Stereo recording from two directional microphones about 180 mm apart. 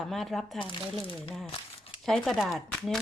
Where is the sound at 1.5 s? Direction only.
35° left (ahead or behind).